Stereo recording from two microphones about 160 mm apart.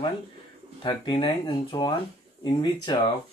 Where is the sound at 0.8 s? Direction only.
30° left (ahead or behind).